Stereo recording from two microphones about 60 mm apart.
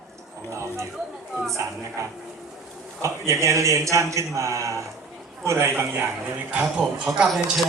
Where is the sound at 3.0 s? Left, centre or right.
Right.